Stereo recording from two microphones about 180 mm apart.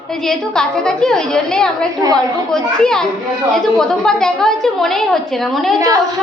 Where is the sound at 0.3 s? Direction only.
5° left (ahead or behind).